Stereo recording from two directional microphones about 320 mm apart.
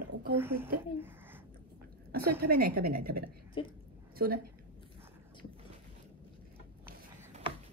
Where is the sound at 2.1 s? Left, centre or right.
Right.